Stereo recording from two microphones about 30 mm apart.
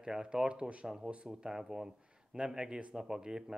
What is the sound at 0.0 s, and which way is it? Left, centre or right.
Speech, right.